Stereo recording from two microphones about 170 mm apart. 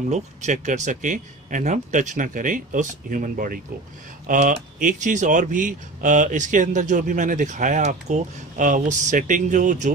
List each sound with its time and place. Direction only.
0.1 s speech: 45° right (ahead or behind)